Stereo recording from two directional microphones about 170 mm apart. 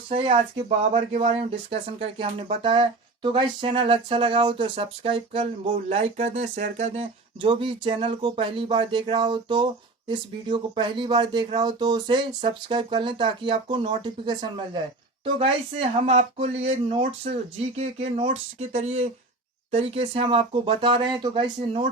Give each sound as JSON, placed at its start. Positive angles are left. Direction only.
{"t": 0.9, "sound": "speech", "side_deg": -40}
{"t": 5.7, "sound": "speech", "side_deg": -45}